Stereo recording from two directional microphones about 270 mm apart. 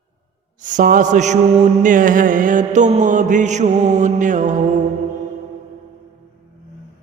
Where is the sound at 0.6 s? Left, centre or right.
Right.